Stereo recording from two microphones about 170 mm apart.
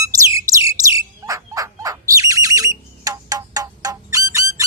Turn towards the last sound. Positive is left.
turn(degrees=-20)  # may be behind; listen again after turning